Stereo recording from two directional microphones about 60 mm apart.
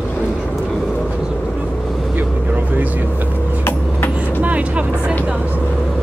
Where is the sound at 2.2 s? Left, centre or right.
Right.